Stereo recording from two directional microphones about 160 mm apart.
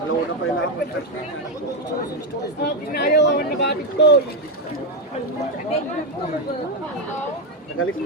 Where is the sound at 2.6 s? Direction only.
85° left.